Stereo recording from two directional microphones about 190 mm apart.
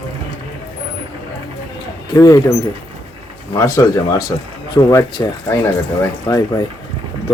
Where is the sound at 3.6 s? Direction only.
15° left (ahead or behind).